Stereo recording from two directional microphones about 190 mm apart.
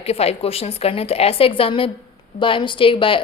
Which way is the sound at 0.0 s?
30° left (ahead or behind).